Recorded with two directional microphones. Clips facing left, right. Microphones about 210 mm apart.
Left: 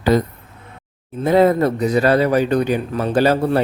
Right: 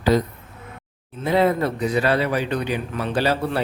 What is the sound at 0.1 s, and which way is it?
Speech, 50° left (ahead or behind).